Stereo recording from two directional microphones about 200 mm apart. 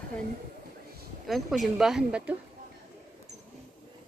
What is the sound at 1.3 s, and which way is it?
Speech, centre (ahead or behind).